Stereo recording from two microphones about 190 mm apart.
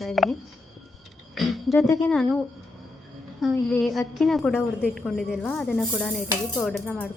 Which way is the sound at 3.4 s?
Centre (ahead or behind).